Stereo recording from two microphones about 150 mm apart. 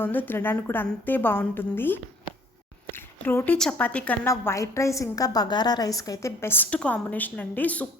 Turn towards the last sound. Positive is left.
turn(degrees=10)  # may be behind; listen again after turning